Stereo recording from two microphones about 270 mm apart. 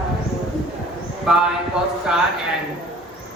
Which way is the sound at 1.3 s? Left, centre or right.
Centre.